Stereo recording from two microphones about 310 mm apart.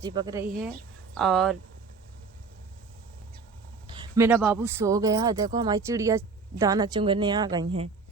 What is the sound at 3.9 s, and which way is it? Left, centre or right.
Speech, centre.